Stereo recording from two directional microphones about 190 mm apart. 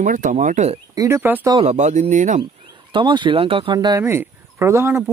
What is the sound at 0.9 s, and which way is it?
Speech, 15° right (ahead or behind).